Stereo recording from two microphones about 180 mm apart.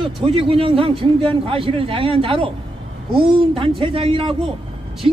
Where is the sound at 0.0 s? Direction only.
30° right (ahead or behind).